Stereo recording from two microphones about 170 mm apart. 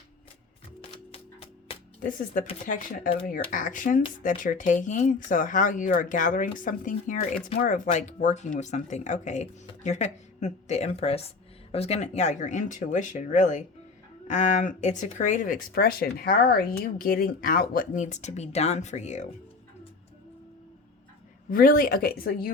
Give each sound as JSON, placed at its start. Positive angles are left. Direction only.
{"t": 0.8, "sound": "music", "side_deg": 35}
{"t": 2.0, "sound": "speech", "side_deg": 55}
{"t": 3.5, "sound": "speech", "side_deg": 50}
{"t": 21.5, "sound": "speech", "side_deg": 60}